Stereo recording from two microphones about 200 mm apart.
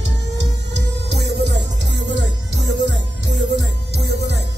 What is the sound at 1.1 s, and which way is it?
Music, 55° right (ahead or behind).